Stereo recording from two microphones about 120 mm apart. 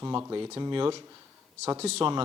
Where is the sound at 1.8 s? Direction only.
60° right (ahead or behind).